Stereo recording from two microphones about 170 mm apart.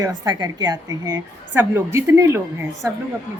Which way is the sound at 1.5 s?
15° right (ahead or behind).